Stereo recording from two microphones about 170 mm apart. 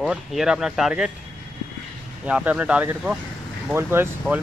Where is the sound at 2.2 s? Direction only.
5° right (ahead or behind).